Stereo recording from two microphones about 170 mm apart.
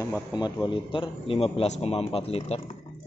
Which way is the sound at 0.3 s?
25° left (ahead or behind).